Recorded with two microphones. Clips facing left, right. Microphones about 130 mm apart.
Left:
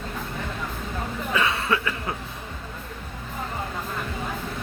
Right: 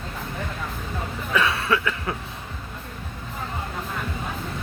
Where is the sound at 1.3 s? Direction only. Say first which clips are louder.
Right 2 dB; 25° left (ahead or behind).